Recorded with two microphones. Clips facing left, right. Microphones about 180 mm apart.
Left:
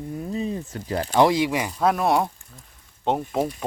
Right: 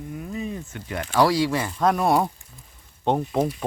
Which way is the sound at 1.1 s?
20° left (ahead or behind).